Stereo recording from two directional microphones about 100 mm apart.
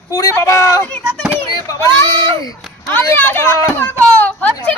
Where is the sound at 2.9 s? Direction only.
20° left (ahead or behind).